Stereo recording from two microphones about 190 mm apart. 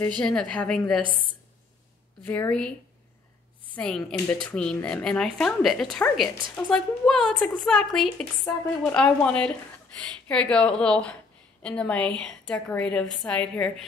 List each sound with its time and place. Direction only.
0.2 s speech: 5° left (ahead or behind)
2.2 s a woman's voice: 10° left (ahead or behind)
3.7 s speech: 5° left (ahead or behind)